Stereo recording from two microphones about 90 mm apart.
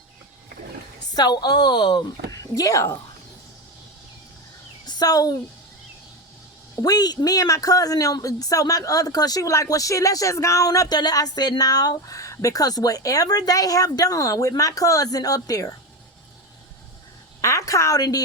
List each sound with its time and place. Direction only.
1.1 s a woman's voice: 50° left (ahead or behind)
2.3 s speech: 40° left (ahead or behind)
4.9 s speech: 45° left (ahead or behind)
6.8 s speech: 50° left (ahead or behind)
17.4 s a sound: 35° left (ahead or behind)